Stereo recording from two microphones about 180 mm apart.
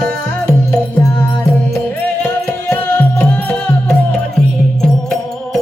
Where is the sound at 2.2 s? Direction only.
10° left (ahead or behind).